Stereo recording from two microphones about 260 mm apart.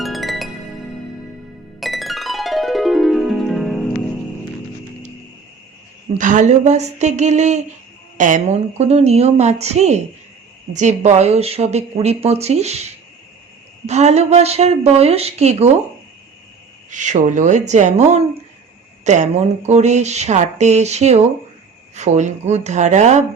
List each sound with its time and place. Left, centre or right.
0.0 s music: centre
1.8 s music: centre
6.1 s speech: right
16.9 s speech: right